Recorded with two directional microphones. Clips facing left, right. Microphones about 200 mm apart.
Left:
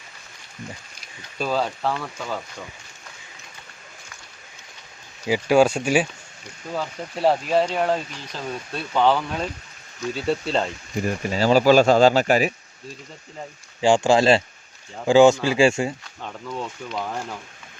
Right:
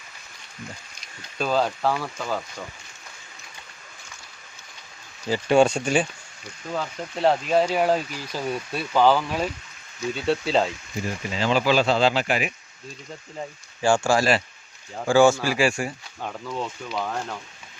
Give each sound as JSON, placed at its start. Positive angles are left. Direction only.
{"t": 1.4, "sound": "speech", "side_deg": 0}
{"t": 5.2, "sound": "speech", "side_deg": 10}
{"t": 11.0, "sound": "speech", "side_deg": 45}
{"t": 13.8, "sound": "speech", "side_deg": 20}
{"t": 16.2, "sound": "speech", "side_deg": 0}